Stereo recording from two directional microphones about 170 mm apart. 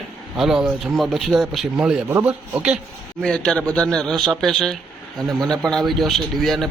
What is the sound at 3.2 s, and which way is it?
Speech, 5° left (ahead or behind).